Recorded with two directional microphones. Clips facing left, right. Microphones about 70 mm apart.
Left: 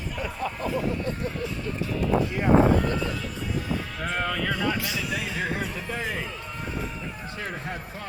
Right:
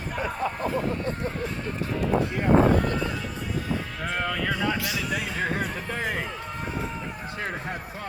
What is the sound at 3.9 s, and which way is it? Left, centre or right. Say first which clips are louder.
Speech: even; centre.